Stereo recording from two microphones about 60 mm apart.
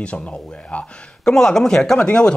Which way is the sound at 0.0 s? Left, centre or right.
Centre.